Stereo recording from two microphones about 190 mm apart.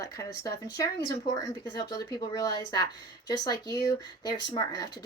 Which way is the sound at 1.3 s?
20° left (ahead or behind).